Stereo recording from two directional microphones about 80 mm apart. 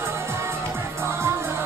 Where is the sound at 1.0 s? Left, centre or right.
Right.